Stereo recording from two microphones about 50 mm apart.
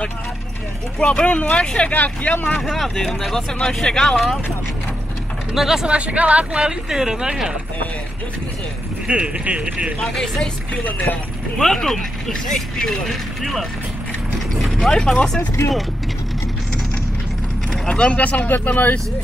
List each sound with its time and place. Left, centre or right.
1.0 s speech: left
2.6 s speech: centre
5.5 s speech: centre
5.9 s speech: right
6.9 s speech: centre
9.0 s speech: right
9.9 s speech: centre
11.5 s speech: centre
14.9 s speech: centre
17.8 s speech: left
18.5 s speech: left